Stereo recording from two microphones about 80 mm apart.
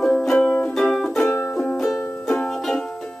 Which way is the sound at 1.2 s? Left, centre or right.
Left.